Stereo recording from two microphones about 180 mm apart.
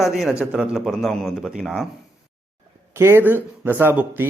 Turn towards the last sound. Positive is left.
turn(degrees=-10)  # may be behind; listen again after turning